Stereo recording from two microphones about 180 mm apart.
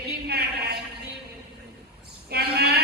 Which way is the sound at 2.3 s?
60° right (ahead or behind).